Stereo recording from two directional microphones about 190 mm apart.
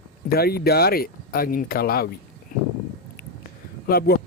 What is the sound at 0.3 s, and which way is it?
Speech, 55° left (ahead or behind).